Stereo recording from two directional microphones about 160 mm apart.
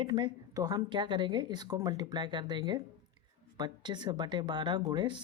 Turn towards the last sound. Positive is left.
turn(degrees=-30)  # may be behind; listen again after turning